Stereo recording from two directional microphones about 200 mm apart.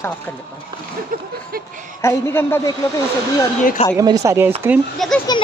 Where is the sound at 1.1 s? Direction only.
45° right (ahead or behind).